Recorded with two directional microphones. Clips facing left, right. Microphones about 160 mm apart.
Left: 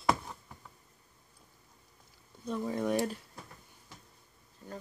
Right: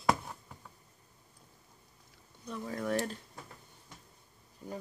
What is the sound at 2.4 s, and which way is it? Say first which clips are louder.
Speech: left 4 dB; 25° left (ahead or behind).